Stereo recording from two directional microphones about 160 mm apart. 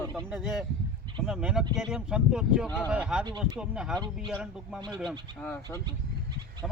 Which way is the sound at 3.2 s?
25° right (ahead or behind).